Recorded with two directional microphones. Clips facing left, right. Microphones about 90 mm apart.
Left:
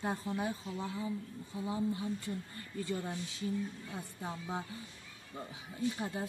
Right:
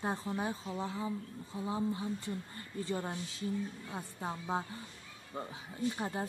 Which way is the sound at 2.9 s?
35° right (ahead or behind).